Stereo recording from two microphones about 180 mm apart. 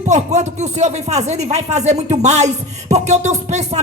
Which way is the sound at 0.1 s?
40° right (ahead or behind).